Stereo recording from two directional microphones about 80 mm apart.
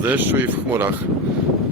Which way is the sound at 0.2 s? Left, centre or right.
Right.